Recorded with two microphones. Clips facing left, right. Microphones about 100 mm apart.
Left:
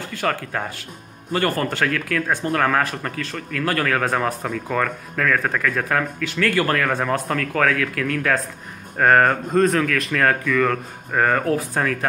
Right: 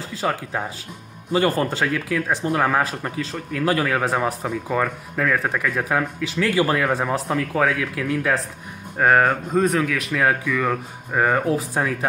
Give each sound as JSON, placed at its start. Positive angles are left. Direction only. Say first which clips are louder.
{"t": 0.2, "sound": "speech", "louder": "even", "side_deg": -15}